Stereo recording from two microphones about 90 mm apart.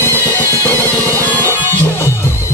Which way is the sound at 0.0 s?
25° left (ahead or behind).